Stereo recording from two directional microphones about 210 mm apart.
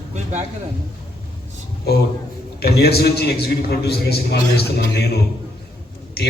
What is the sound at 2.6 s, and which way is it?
A man's voice, 50° left (ahead or behind).